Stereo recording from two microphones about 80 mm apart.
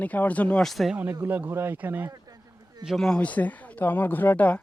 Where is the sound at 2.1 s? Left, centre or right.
Right.